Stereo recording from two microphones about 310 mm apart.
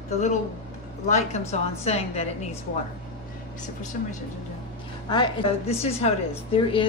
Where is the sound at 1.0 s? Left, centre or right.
Left.